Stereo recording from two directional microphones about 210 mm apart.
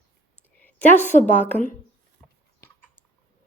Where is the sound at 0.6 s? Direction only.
10° left (ahead or behind).